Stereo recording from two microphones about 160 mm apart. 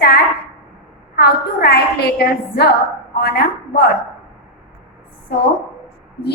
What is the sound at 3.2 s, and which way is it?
Speech, 80° left.